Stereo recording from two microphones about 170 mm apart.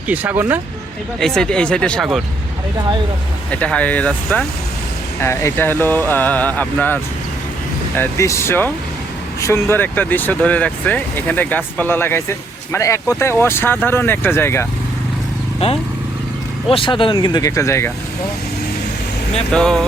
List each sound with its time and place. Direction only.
0.1 s speech: 10° right (ahead or behind)
1.2 s speech: 5° left (ahead or behind)
3.5 s speech: 10° left (ahead or behind)
15.6 s speech: 35° left (ahead or behind); by 17.9 s 15° left (ahead or behind)
19.5 s speech: 5° left (ahead or behind)